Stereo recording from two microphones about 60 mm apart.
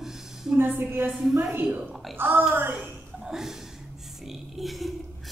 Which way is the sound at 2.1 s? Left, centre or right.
Right.